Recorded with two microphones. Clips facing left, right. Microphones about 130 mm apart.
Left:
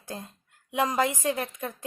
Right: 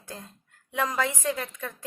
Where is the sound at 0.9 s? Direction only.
15° left (ahead or behind).